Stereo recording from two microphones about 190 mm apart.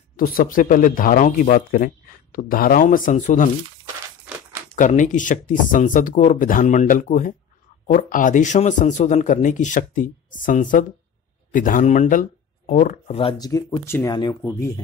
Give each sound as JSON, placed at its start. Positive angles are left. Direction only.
{"t": 0.1, "sound": "speech", "side_deg": 50}
{"t": 4.7, "sound": "a man's voice", "side_deg": 40}
{"t": 13.5, "sound": "speech", "side_deg": 20}